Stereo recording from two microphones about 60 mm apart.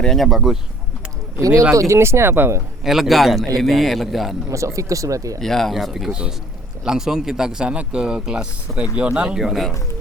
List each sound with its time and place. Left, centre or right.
0.0 s speech: centre
0.3 s a man's voice: centre
1.4 s speech: right
2.8 s a man's voice: centre
4.4 s speech: right
5.4 s speech: centre
5.7 s a man's voice: centre